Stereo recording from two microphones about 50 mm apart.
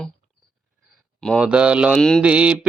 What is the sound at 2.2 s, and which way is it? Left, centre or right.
Mantra, right.